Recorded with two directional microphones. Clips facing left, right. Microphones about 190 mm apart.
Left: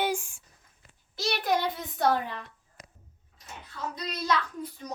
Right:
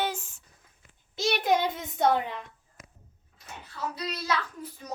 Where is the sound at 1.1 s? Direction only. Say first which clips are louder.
Right 3 dB; 20° right (ahead or behind).